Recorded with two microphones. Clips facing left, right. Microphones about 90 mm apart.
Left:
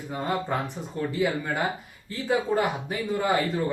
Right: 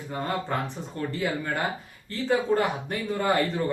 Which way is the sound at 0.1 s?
10° left (ahead or behind).